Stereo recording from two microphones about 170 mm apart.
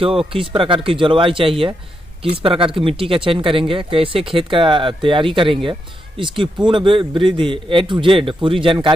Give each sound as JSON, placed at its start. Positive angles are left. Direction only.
{"t": 0.0, "sound": "speech", "side_deg": -35}